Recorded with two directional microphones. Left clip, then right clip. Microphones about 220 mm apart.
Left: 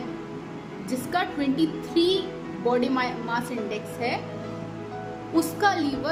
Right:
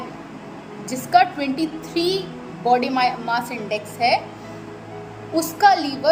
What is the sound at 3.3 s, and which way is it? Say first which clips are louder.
Speech: right 5 dB; 40° right (ahead or behind).